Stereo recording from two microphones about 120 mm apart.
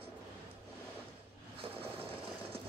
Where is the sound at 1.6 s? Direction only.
50° right (ahead or behind).